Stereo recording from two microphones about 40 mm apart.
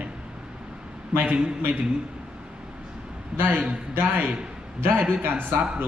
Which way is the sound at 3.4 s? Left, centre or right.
Right.